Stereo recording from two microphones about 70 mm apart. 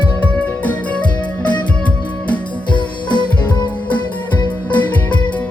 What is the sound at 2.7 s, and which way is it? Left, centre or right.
Music, left.